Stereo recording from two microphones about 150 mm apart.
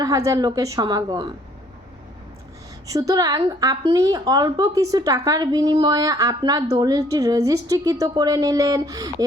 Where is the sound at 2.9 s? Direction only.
25° right (ahead or behind).